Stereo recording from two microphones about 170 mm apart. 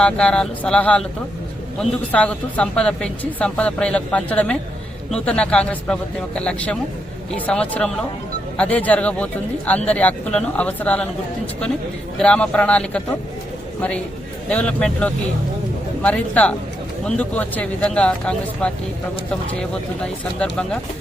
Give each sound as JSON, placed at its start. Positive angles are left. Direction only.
{"t": 0.0, "sound": "speech", "side_deg": 5}
{"t": 12.2, "sound": "speech", "side_deg": 5}
{"t": 14.5, "sound": "speech", "side_deg": 5}
{"t": 20.4, "sound": "speech", "side_deg": 5}